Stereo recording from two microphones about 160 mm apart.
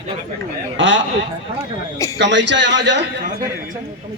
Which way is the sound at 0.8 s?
90° right.